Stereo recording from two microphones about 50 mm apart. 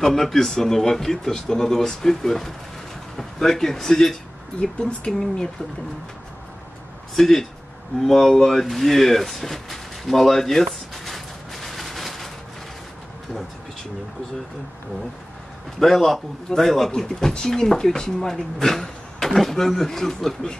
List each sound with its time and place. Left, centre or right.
0.0 s speech: centre
4.7 s speech: centre
7.2 s speech: centre
8.0 s a sound: centre
15.8 s speech: centre